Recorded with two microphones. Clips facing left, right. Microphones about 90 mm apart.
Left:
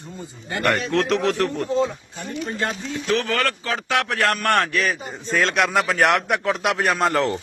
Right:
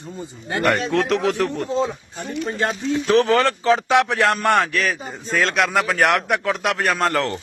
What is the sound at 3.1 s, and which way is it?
Speech, 30° right (ahead or behind).